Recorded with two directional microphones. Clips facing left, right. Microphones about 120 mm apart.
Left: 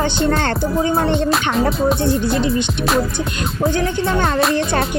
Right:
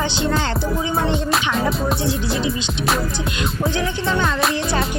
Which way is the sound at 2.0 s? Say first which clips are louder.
Left 4 dB; 55° left (ahead or behind).